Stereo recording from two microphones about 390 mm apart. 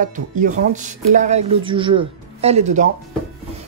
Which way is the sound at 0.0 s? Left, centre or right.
Centre.